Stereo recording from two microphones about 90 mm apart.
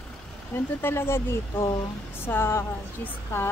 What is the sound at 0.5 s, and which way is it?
A woman's voice, 25° left (ahead or behind).